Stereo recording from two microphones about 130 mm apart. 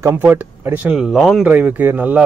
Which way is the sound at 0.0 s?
15° right (ahead or behind).